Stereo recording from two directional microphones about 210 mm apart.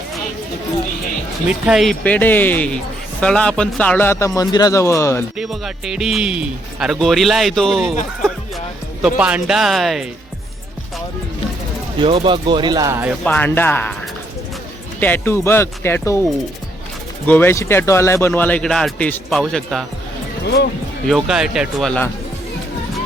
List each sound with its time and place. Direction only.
1.5 s speech: 5° right (ahead or behind); by 5.2 s 15° left (ahead or behind)
5.4 s speech: centre (ahead or behind)
9.0 s speech: 5° right (ahead or behind)
11.9 s speech: 25° right (ahead or behind)
13.2 s speech: 10° left (ahead or behind)
15.0 s speech: 10° left (ahead or behind)
17.2 s speech: 10° left (ahead or behind)
20.4 s speech: 50° left (ahead or behind)
21.1 s speech: centre (ahead or behind)